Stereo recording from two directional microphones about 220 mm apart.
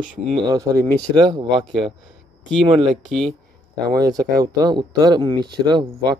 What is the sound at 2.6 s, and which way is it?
Speech, 20° right (ahead or behind).